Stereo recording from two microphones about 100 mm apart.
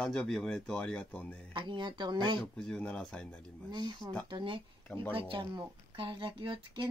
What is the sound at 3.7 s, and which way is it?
Speech, 45° right (ahead or behind).